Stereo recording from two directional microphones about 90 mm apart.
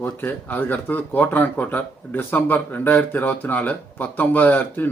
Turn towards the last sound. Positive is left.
turn(degrees=20)  # may be behind; listen again after turning